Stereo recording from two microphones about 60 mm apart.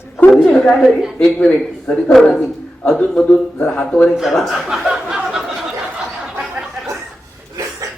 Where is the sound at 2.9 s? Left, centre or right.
Centre.